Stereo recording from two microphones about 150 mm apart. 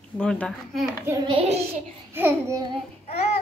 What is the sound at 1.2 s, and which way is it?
Speech, 40° right (ahead or behind).